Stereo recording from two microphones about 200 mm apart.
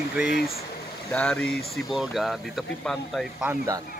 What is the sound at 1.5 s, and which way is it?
Speech, 50° left (ahead or behind).